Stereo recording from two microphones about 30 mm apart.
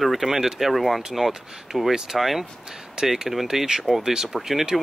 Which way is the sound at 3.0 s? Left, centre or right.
Right.